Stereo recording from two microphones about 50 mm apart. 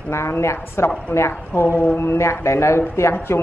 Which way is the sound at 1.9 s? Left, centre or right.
Left.